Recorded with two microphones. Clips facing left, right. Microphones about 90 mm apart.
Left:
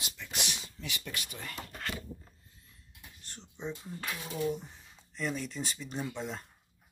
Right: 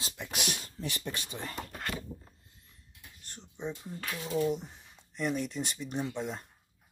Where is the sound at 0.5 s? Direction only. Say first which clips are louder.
Right 4 dB; 45° right (ahead or behind); by 1.5 s 25° right (ahead or behind).